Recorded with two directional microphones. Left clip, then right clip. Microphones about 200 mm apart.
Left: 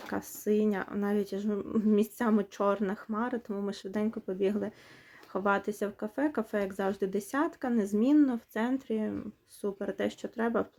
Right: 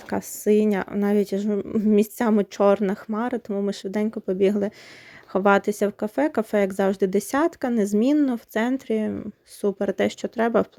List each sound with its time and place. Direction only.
0.1 s speech: 35° right (ahead or behind)